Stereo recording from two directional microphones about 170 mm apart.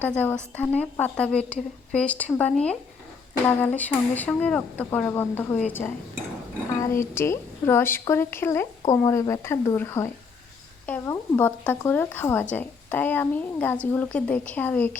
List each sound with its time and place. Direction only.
0.0 s speech: 10° left (ahead or behind)
6.9 s speech: 15° left (ahead or behind)